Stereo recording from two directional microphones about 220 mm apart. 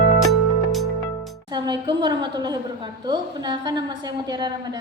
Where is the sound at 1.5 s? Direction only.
20° right (ahead or behind).